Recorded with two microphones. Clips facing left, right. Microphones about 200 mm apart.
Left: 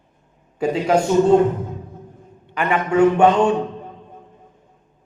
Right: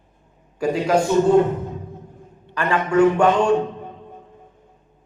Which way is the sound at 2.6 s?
20° left (ahead or behind).